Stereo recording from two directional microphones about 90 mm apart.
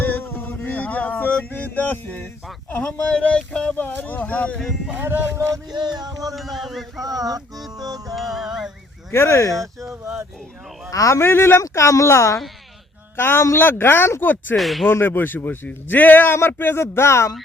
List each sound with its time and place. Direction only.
0.0 s a sound: 20° left (ahead or behind)
1.5 s a man's voice: 20° left (ahead or behind)
5.7 s music: 50° right (ahead or behind)
6.3 s music: centre (ahead or behind)
7.0 s music: 45° right (ahead or behind)
8.1 s music: centre (ahead or behind)
9.1 s a man's voice: 30° left (ahead or behind)
9.6 s speech: 35° right (ahead or behind)
10.9 s a man's voice: 35° left (ahead or behind)
14.5 s music: centre (ahead or behind)
14.8 s a man's voice: 25° left (ahead or behind)